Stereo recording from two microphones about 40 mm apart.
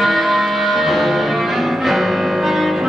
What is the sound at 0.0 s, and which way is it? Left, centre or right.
Music, centre.